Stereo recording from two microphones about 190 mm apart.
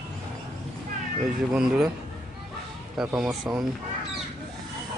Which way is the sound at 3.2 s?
Centre (ahead or behind).